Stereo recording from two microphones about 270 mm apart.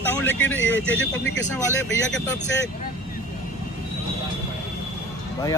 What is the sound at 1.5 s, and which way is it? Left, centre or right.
Speech, centre.